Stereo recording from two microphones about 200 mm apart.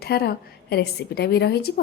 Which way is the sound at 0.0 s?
50° left (ahead or behind).